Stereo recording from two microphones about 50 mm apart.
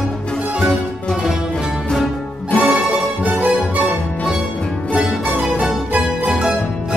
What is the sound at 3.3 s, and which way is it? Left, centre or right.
Music, right.